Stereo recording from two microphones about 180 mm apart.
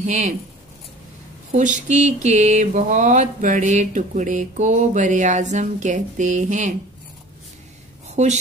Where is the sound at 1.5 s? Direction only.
45° right (ahead or behind).